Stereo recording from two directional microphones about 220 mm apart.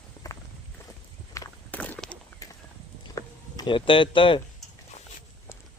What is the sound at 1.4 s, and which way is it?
Walk, 10° left (ahead or behind).